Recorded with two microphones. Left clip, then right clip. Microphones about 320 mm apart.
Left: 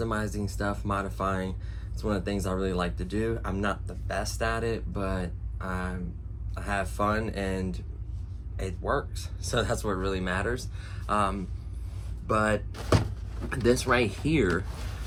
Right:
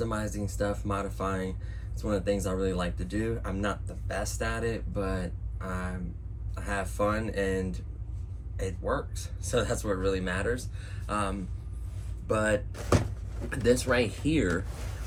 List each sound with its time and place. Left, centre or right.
0.0 s speech: centre